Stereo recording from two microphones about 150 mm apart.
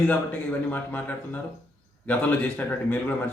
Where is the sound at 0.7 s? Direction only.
10° left (ahead or behind).